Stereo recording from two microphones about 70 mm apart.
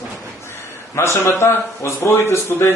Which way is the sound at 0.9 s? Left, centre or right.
Left.